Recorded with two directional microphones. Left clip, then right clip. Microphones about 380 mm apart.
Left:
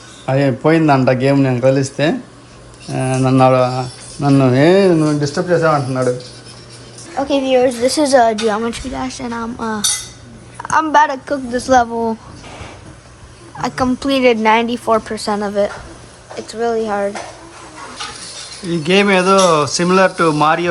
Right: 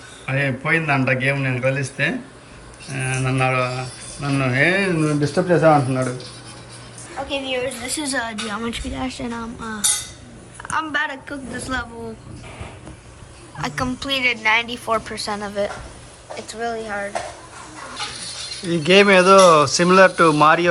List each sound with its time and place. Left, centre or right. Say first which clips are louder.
0.3 s a man's voice: left 7 dB; centre
3.8 s speech: left 7 dB; right
4.4 s a woman's voice: left 6 dB; centre
7.3 s a woman's voice: left 11 dB; centre
13.6 s a woman's voice: left 7 dB; centre
18.5 s a woman's voice: even; centre